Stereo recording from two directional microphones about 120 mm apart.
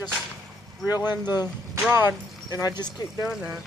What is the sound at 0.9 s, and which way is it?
Speech, 30° left (ahead or behind).